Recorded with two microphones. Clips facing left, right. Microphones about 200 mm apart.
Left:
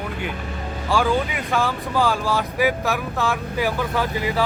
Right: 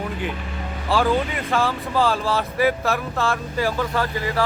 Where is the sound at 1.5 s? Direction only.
Centre (ahead or behind).